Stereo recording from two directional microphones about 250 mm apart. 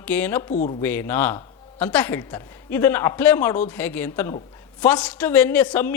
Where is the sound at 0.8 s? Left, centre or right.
Centre.